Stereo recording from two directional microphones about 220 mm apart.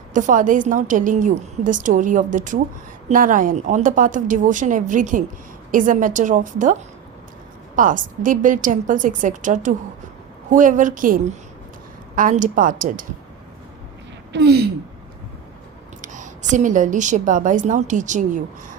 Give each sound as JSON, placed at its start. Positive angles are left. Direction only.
{"t": 0.1, "sound": "a woman's voice", "side_deg": -35}
{"t": 7.8, "sound": "a woman's voice", "side_deg": -35}
{"t": 14.3, "sound": "speech", "side_deg": -50}
{"t": 16.0, "sound": "a woman's voice", "side_deg": -35}